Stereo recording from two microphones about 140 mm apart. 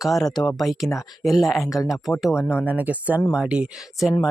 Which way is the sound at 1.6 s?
25° left (ahead or behind).